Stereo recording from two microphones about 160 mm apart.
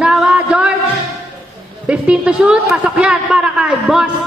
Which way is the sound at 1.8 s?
5° right (ahead or behind).